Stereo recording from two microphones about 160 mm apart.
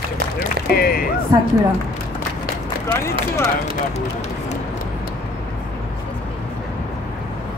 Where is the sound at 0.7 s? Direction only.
70° left (ahead or behind).